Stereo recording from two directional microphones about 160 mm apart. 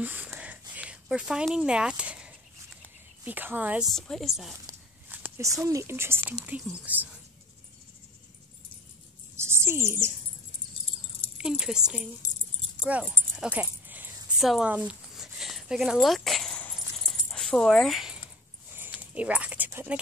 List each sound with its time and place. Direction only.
0.0 s a sound: 10° right (ahead or behind)
3.3 s speech: 10° right (ahead or behind)
3.9 s speech: centre (ahead or behind)
4.6 s speech: 15° right (ahead or behind)
9.4 s speech: 15° right (ahead or behind)
11.3 s speech: 5° right (ahead or behind)
13.4 s dog: 10° right (ahead or behind)